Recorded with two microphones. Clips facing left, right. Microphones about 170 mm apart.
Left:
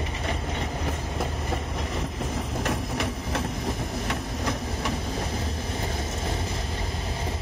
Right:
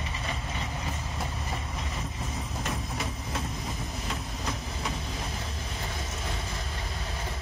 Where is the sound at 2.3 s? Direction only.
75° left (ahead or behind).